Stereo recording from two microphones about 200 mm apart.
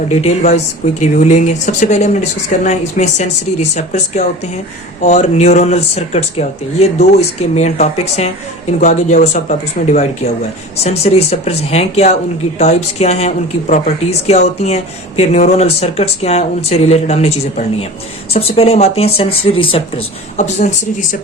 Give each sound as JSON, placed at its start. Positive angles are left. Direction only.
{"t": 0.1, "sound": "speech", "side_deg": 35}